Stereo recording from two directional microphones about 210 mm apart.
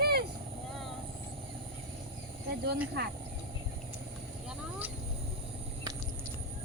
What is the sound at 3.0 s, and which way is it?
Speech, 55° right (ahead or behind).